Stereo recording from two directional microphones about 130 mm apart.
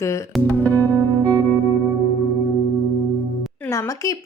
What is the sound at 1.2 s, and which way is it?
Music, 20° right (ahead or behind).